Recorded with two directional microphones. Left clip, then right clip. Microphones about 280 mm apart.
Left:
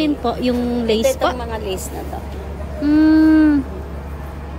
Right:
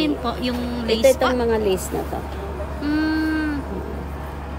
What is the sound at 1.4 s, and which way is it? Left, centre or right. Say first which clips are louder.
Speech: right 5 dB; right.